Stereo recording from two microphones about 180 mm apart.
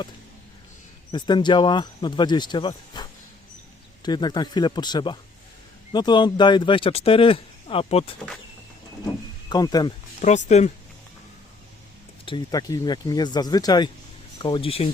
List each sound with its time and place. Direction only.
1.1 s speech: 25° left (ahead or behind)
9.5 s speech: 20° left (ahead or behind)
10.2 s speech: 40° left (ahead or behind)
12.2 s speech: 25° left (ahead or behind)